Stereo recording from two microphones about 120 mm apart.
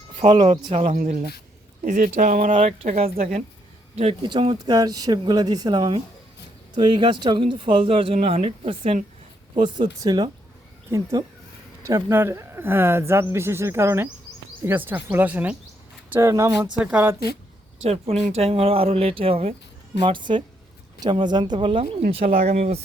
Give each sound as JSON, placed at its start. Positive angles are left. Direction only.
{"t": 0.2, "sound": "speech", "side_deg": -50}
{"t": 2.6, "sound": "speech", "side_deg": -80}
{"t": 4.2, "sound": "speech", "side_deg": -40}
{"t": 4.5, "sound": "speech", "side_deg": -30}
{"t": 9.6, "sound": "speech", "side_deg": -40}
{"t": 10.9, "sound": "speech", "side_deg": -20}
{"t": 16.3, "sound": "speech", "side_deg": -30}
{"t": 16.8, "sound": "speech", "side_deg": -15}
{"t": 17.8, "sound": "speech", "side_deg": -60}
{"t": 20.0, "sound": "speech", "side_deg": -40}